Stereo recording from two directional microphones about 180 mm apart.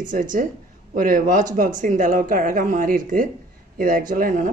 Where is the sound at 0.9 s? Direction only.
50° right (ahead or behind).